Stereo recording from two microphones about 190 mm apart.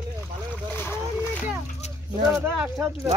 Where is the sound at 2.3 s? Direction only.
15° right (ahead or behind).